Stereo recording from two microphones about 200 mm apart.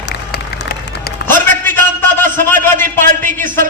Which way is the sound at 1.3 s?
10° left (ahead or behind).